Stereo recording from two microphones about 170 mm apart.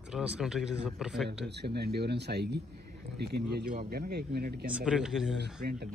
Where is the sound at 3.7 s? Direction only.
60° right (ahead or behind).